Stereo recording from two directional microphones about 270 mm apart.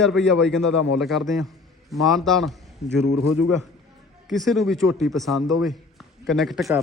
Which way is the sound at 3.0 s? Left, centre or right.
Left.